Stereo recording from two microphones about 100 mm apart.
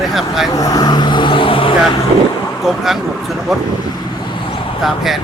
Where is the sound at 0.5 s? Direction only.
40° left (ahead or behind); by 2.0 s 60° left (ahead or behind).